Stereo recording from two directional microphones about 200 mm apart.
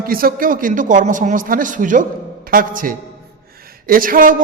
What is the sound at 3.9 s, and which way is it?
Speech, 45° right (ahead or behind).